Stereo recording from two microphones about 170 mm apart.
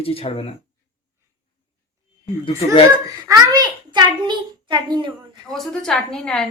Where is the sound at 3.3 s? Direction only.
25° right (ahead or behind).